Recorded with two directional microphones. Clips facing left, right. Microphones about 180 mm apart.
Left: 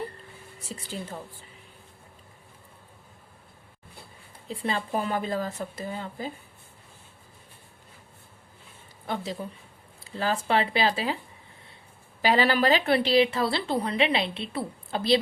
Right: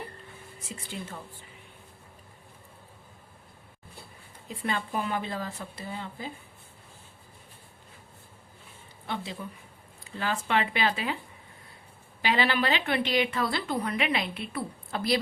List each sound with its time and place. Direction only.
0.6 s speech: 35° left (ahead or behind)
4.4 s a woman's voice: 30° left (ahead or behind)
9.0 s a woman's voice: 40° left (ahead or behind)
12.2 s a woman's voice: 40° left (ahead or behind)